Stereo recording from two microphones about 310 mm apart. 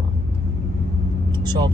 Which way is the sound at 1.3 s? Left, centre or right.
Centre.